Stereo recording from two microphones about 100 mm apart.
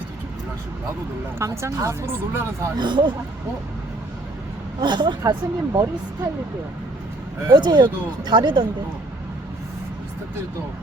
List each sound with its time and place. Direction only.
1.4 s speech: 30° right (ahead or behind)
2.7 s speech: 50° right (ahead or behind)
4.8 s speech: 50° right (ahead or behind)
7.4 s speech: 50° right (ahead or behind)